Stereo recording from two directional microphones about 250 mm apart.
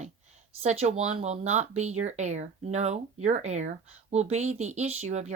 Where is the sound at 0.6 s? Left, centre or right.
Right.